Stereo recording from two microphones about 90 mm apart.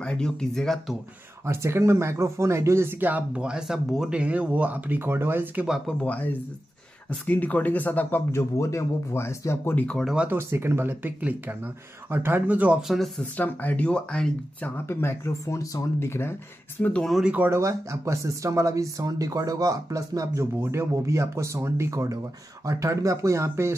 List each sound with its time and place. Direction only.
0.0 s speech: 10° left (ahead or behind)
1.4 s speech: 30° right (ahead or behind)
5.9 s speech: 15° left (ahead or behind); by 9.8 s 30° left (ahead or behind)
9.8 s speech: 10° left (ahead or behind)
10.2 s speech: 25° right (ahead or behind)
12.8 s speech: centre (ahead or behind)
13.2 s speech: 20° left (ahead or behind)
14.9 s speech: 25° left (ahead or behind)
17.2 s speech: 15° right (ahead or behind)
17.5 s speech: 35° right (ahead or behind)